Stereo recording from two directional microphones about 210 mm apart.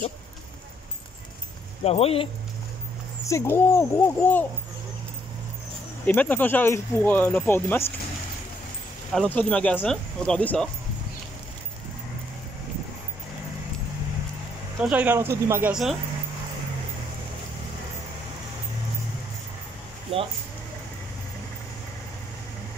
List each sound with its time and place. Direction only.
1.9 s speech: 30° left (ahead or behind)
3.3 s speech: 10° left (ahead or behind)
6.0 s speech: 10° left (ahead or behind)
9.1 s speech: 5° left (ahead or behind)
14.8 s speech: 5° right (ahead or behind)